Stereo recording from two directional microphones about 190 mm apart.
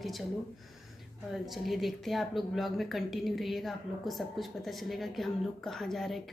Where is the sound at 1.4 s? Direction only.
Centre (ahead or behind).